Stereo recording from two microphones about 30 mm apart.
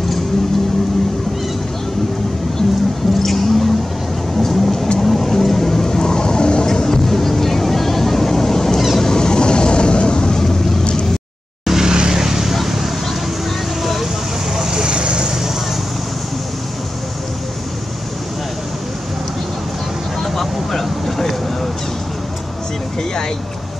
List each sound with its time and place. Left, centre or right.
3.1 s a sound: centre
4.4 s vehicle: centre; by 6.6 s left
6.6 s music: centre
8.9 s vehicle: centre
10.8 s vehicle: left
11.6 s vehicle: centre
14.7 s vehicle: right
20.2 s vehicle: centre